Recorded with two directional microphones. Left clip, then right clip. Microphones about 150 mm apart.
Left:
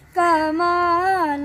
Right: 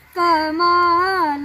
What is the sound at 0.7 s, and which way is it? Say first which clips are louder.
Child singing: right 5 dB; 15° left (ahead or behind).